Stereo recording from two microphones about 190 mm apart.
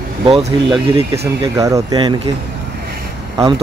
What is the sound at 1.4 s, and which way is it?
Speech, 15° right (ahead or behind).